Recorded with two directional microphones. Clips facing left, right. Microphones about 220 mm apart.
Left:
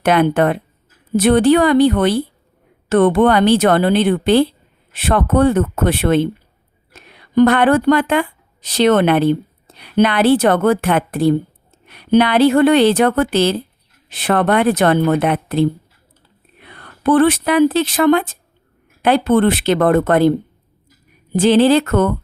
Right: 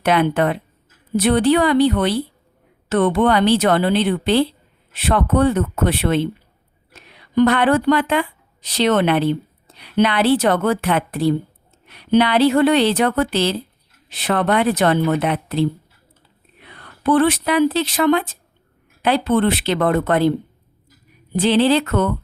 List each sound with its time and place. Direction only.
0.0 s speech: 50° left (ahead or behind)
7.3 s speech: 50° left (ahead or behind)
21.3 s speech: 45° left (ahead or behind)